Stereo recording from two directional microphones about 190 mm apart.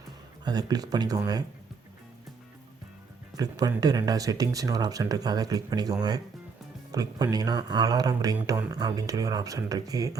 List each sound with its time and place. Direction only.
0.4 s speech: 20° right (ahead or behind)
3.3 s speech: 20° right (ahead or behind)